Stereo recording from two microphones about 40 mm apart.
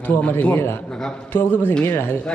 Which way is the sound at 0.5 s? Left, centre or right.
Left.